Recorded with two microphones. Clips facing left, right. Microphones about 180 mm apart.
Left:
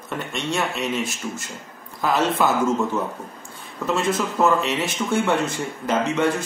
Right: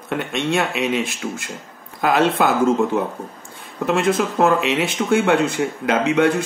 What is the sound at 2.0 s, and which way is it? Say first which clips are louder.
Speech: right 3 dB; 70° right (ahead or behind).